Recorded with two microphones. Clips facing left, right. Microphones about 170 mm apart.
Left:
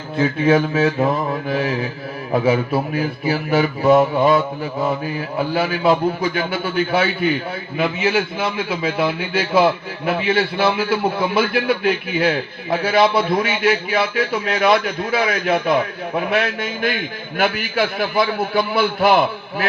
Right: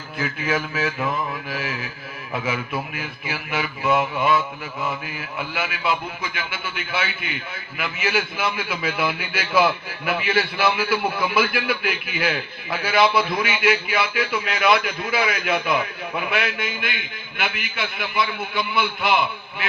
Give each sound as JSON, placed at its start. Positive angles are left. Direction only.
{"t": 0.2, "sound": "a man's voice", "side_deg": 30}